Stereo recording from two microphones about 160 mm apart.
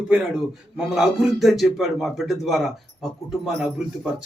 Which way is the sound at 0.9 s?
5° right (ahead or behind).